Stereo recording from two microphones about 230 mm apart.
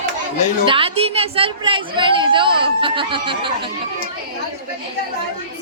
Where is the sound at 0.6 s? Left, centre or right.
Right.